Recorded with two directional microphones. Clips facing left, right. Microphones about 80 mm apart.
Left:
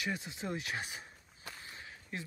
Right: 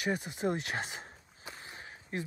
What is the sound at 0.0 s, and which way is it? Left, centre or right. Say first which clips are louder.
Speech: right 6 dB; right.